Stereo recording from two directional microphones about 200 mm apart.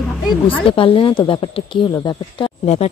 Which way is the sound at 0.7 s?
25° left (ahead or behind).